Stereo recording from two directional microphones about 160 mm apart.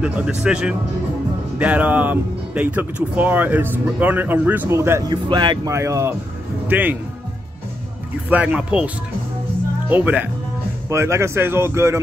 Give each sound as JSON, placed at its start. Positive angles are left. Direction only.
{"t": 0.0, "sound": "speech", "side_deg": -5}
{"t": 8.3, "sound": "speech", "side_deg": -10}